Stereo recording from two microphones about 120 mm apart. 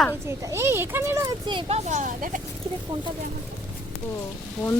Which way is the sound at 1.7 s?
90° right.